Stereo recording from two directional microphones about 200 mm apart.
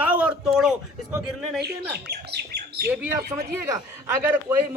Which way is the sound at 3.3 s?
25° right (ahead or behind).